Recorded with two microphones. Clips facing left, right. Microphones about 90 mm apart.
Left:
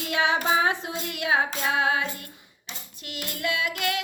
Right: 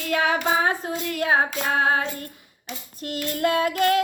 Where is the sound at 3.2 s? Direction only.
40° right (ahead or behind).